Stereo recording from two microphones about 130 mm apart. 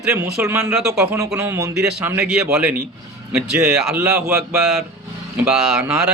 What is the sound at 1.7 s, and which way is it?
Speech, 5° right (ahead or behind).